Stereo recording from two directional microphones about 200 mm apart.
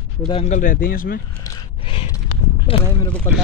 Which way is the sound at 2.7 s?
25° left (ahead or behind).